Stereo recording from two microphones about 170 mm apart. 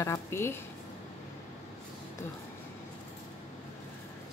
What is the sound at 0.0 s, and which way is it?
Speech, 15° left (ahead or behind).